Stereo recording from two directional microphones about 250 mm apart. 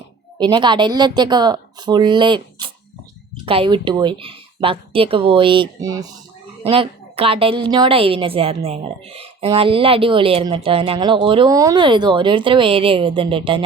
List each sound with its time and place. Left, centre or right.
0.3 s a woman's voice: centre